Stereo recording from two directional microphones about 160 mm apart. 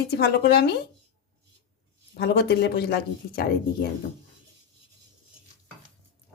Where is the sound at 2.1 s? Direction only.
90° left.